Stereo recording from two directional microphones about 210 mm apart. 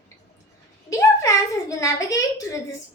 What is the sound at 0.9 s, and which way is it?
A woman's voice, 15° left (ahead or behind).